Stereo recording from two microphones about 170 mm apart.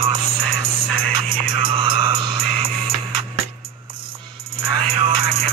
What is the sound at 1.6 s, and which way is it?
Music, 30° right (ahead or behind).